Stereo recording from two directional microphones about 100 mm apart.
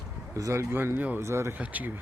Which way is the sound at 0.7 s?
20° right (ahead or behind).